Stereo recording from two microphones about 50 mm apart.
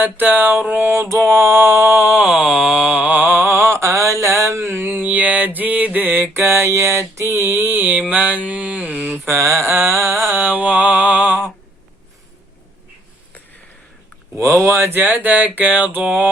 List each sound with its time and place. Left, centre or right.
0.0 s mantra: right
1.2 s a sound: right
2.2 s a sound: centre
3.0 s mantra: right
3.5 s mantra: right
4.7 s mantra: right
7.2 s mantra: right
9.1 s mantra: right
10.3 s mantra: right
14.7 s speech: right
14.9 s mantra: right